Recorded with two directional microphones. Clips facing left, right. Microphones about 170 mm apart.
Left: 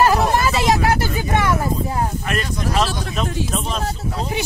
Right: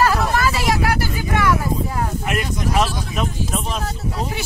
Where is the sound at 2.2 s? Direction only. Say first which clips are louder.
Right 1 dB; 15° right (ahead or behind).